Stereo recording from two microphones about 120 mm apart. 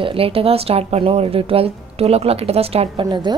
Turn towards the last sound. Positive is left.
turn(degrees=-40)  # may be behind; listen again after turning